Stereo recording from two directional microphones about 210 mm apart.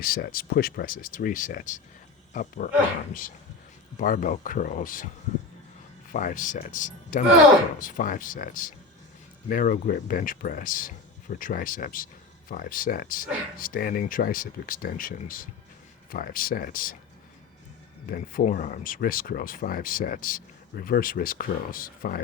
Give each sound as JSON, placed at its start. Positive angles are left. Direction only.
{"t": 0.0, "sound": "speech", "side_deg": 45}
{"t": 3.9, "sound": "speech", "side_deg": 40}
{"t": 6.1, "sound": "speech", "side_deg": 40}
{"t": 18.1, "sound": "speech", "side_deg": 40}